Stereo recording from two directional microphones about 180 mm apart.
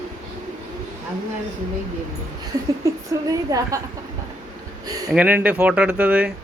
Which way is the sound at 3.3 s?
20° right (ahead or behind).